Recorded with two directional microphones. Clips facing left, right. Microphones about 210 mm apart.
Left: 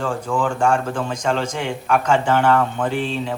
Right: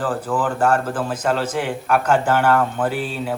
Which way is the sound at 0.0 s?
5° right (ahead or behind).